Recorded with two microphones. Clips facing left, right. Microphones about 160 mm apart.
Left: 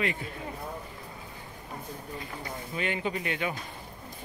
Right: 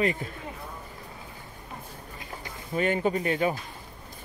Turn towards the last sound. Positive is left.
turn(degrees=-40)  # may be behind; listen again after turning